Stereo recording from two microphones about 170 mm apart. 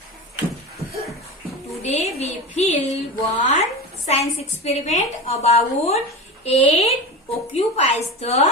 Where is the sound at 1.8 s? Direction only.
40° left (ahead or behind).